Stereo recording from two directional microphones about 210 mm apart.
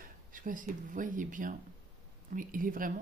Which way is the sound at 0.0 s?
40° right (ahead or behind).